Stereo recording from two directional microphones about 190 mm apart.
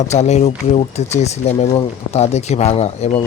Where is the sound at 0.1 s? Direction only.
35° left (ahead or behind).